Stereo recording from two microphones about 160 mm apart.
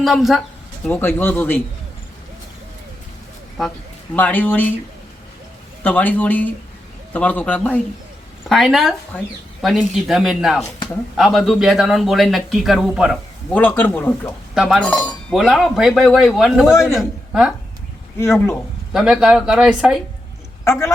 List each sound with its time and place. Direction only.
0.0 s speech: centre (ahead or behind)
0.9 s speech: 10° left (ahead or behind)
3.6 s speech: centre (ahead or behind)
4.1 s speech: 10° left (ahead or behind)
5.8 s speech: 10° left (ahead or behind)
13.5 s speech: 10° left (ahead or behind)
14.5 s speech: centre (ahead or behind)
18.2 s speech: 15° left (ahead or behind)
18.9 s speech: 5° right (ahead or behind)
20.7 s speech: 15° left (ahead or behind)